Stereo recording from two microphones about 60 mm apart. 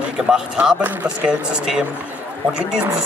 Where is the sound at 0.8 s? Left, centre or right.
Right.